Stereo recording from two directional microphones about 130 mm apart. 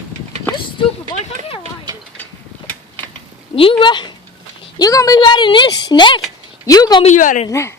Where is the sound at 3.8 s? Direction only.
35° left (ahead or behind).